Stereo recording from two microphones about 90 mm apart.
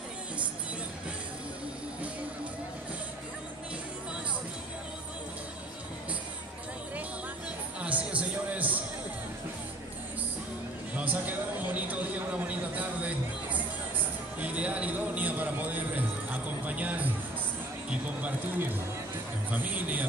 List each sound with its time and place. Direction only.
7.8 s music: 15° right (ahead or behind)
11.0 s a sound: 15° right (ahead or behind)
16.3 s music: 15° right (ahead or behind)
19.5 s a man's voice: 20° right (ahead or behind)